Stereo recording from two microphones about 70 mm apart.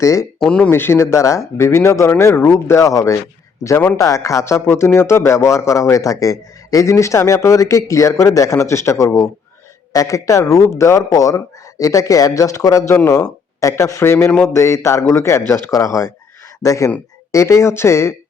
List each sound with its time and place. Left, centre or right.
0.0 s a man's voice: left
0.3 s speech: centre
0.7 s a man's voice: left
11.1 s a man's voice: left
15.7 s a man's voice: left